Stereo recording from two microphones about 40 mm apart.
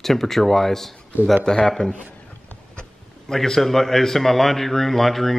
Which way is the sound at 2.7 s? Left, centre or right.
Left.